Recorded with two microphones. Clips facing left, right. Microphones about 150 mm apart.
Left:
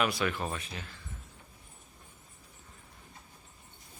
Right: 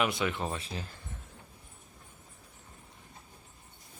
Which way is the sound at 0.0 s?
20° right (ahead or behind).